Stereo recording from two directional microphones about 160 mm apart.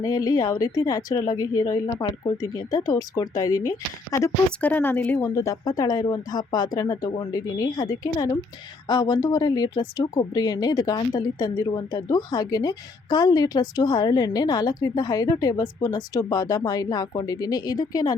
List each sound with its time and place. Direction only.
0.0 s speech: 20° left (ahead or behind)
4.6 s speech: 10° left (ahead or behind)